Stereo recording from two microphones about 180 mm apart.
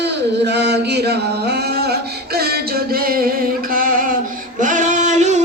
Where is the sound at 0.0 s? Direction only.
70° right (ahead or behind); by 4.0 s 50° right (ahead or behind).